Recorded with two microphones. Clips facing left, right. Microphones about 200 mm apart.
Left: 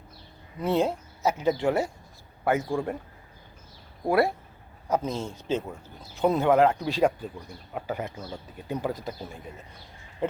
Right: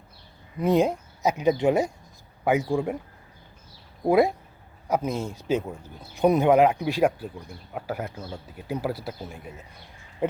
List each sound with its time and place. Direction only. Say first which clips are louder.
0.6 s speech: right 3 dB; 15° right (ahead or behind)
4.0 s speech: right 3 dB; 15° right (ahead or behind)